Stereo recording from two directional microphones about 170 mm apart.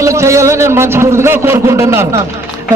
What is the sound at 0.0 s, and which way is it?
A man's voice, 15° right (ahead or behind).